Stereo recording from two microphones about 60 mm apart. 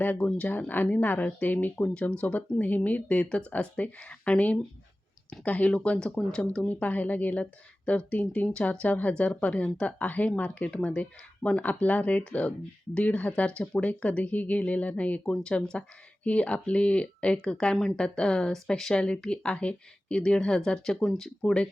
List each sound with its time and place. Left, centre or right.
0.0 s speech: left
1.8 s speech: centre